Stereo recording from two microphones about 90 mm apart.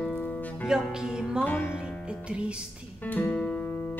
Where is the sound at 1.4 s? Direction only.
25° left (ahead or behind).